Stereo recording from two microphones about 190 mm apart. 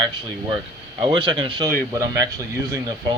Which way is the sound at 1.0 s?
25° right (ahead or behind).